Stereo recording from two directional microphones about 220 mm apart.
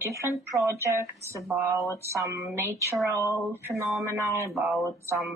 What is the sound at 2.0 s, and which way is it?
Speech, 10° right (ahead or behind).